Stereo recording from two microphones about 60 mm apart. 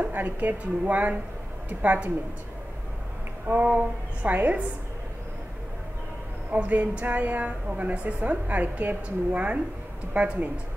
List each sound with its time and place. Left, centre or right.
0.0 s a woman's voice: right
3.6 s a woman's voice: centre
6.5 s a woman's voice: right